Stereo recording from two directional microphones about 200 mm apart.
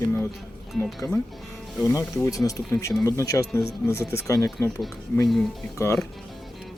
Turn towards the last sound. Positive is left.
turn(degrees=10)  # may be behind; listen again after turning